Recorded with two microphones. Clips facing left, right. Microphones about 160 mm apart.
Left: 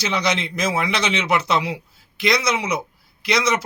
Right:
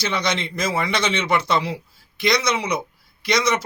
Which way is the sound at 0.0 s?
10° left (ahead or behind).